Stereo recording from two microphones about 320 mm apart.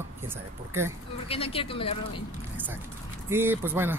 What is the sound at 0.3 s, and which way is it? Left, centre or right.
Speech, centre.